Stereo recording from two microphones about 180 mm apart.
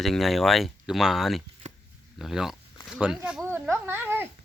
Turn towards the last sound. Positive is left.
turn(degrees=-10)  # may be behind; listen again after turning